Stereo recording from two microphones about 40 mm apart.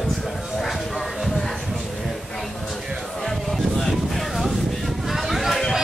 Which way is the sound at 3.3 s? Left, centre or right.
Centre.